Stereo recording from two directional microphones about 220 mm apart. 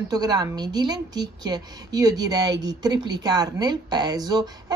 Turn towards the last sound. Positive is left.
turn(degrees=-20)  # may be behind; listen again after turning